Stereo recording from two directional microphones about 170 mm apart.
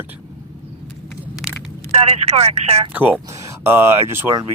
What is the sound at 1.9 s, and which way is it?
Speech, 35° right (ahead or behind).